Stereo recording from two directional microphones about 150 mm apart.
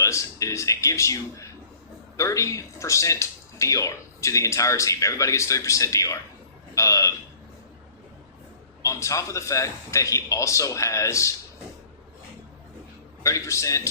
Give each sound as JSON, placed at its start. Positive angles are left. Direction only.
{"t": 0.0, "sound": "speech", "side_deg": 20}
{"t": 8.8, "sound": "speech", "side_deg": 20}
{"t": 13.2, "sound": "speech", "side_deg": 20}